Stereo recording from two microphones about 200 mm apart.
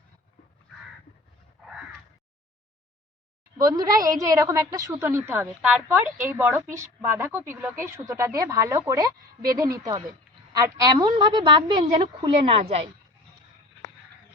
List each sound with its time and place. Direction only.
3.6 s a woman's voice: 20° right (ahead or behind)